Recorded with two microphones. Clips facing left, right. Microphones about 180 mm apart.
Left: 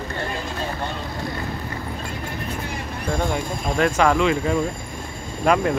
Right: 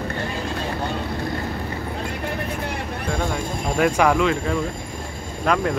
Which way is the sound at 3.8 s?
10° right (ahead or behind).